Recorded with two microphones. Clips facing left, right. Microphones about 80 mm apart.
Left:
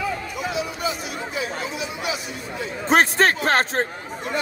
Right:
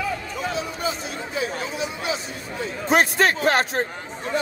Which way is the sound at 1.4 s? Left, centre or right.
Right.